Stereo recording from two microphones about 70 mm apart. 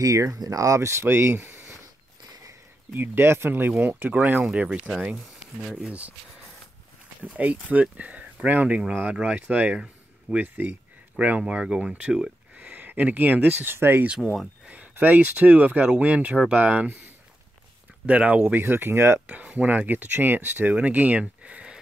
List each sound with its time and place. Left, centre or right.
0.0 s speech: right
2.9 s speech: right; by 6.1 s centre
7.2 s speech: right
14.2 s speech: centre
14.7 s speech: right
18.0 s speech: right
19.2 s speech: centre